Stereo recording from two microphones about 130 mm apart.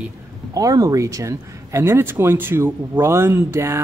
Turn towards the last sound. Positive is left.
turn(degrees=-20)  # may be behind; listen again after turning